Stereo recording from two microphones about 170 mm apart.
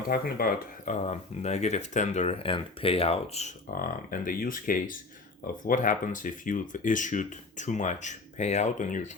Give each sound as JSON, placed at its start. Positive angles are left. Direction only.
{"t": 0.1, "sound": "speech", "side_deg": 60}
{"t": 1.0, "sound": "speech", "side_deg": 40}
{"t": 3.7, "sound": "speech", "side_deg": 55}